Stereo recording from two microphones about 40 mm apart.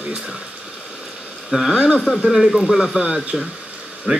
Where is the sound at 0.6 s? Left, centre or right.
Centre.